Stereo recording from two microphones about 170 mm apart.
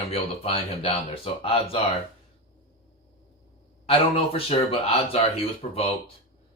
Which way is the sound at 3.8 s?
30° left (ahead or behind).